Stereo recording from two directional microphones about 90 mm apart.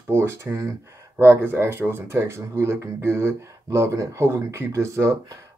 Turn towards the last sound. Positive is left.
turn(degrees=-30)  # may be behind; listen again after turning